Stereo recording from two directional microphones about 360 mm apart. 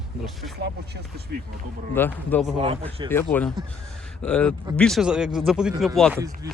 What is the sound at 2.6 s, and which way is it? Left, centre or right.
A man's voice, centre.